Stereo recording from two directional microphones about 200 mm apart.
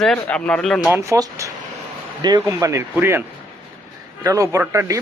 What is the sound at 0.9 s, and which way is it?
A man's voice, 15° right (ahead or behind).